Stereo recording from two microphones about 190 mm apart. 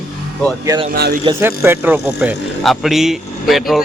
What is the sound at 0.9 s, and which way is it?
Speech, 55° right (ahead or behind).